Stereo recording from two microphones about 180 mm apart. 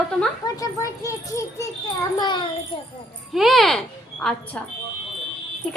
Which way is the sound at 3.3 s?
Centre (ahead or behind).